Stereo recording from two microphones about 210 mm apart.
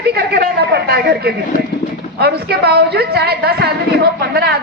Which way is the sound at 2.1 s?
50° right (ahead or behind).